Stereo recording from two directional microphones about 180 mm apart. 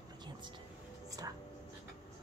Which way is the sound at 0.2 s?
25° right (ahead or behind).